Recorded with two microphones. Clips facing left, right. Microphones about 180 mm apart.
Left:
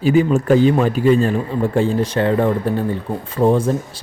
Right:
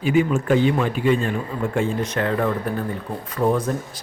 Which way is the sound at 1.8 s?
30° left (ahead or behind).